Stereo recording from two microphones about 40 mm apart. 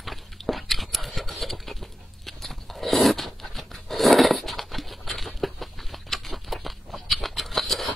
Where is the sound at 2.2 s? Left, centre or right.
Centre.